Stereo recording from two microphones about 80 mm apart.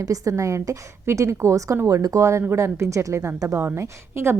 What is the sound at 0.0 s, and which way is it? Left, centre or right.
A woman's voice, right.